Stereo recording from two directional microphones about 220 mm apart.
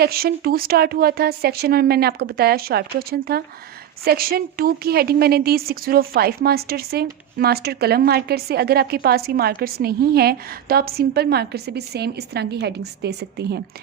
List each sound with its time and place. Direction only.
0.0 s a woman's voice: 45° right (ahead or behind)